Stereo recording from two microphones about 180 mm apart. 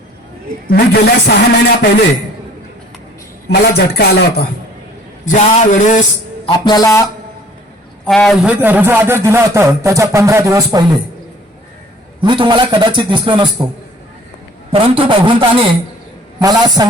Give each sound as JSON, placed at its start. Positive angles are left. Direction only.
{"t": 0.7, "sound": "a man's voice", "side_deg": 60}
{"t": 3.5, "sound": "a man's voice", "side_deg": 65}
{"t": 5.2, "sound": "a man's voice", "side_deg": 45}
{"t": 6.4, "sound": "speech", "side_deg": 20}
{"t": 8.0, "sound": "speech", "side_deg": 5}
{"t": 12.2, "sound": "a man's voice", "side_deg": -25}
{"t": 14.7, "sound": "a man's voice", "side_deg": -30}